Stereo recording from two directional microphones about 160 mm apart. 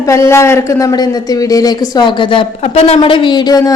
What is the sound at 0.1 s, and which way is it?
A man's voice, 20° left (ahead or behind).